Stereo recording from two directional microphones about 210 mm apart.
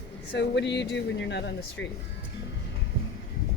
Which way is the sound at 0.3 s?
55° left (ahead or behind).